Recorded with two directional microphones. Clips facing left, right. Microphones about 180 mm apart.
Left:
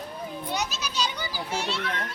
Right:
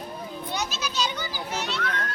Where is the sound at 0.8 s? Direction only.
35° left (ahead or behind).